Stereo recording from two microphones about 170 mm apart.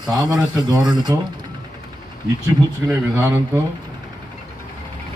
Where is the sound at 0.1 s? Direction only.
25° right (ahead or behind).